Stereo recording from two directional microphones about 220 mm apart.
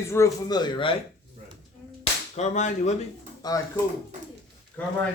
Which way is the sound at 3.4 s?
15° left (ahead or behind).